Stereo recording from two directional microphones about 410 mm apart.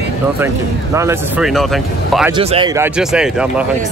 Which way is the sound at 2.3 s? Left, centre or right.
Centre.